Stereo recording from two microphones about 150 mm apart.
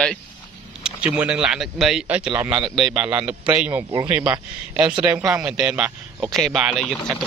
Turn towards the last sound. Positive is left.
turn(degrees=0)  # may be behind; listen again after turning